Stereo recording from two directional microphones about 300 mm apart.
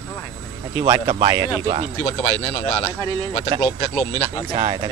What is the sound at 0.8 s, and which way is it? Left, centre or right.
Speech, centre.